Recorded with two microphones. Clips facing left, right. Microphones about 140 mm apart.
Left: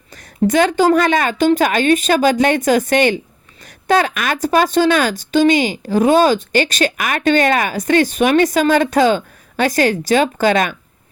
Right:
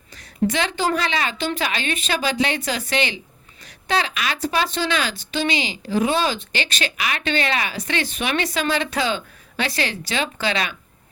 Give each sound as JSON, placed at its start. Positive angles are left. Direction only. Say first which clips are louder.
{"t": 0.2, "sound": "speech", "louder": "left 8 dB", "side_deg": 45}